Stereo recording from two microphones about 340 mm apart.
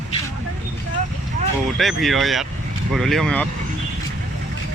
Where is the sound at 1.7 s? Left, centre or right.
Centre.